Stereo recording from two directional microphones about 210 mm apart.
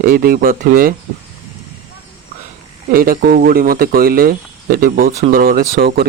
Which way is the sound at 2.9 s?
45° right (ahead or behind).